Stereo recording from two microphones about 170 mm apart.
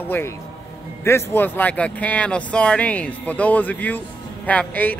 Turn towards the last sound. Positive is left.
turn(degrees=10)  # may be behind; listen again after turning